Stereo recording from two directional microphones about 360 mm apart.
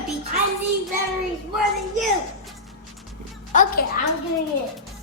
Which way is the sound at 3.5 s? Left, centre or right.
Left.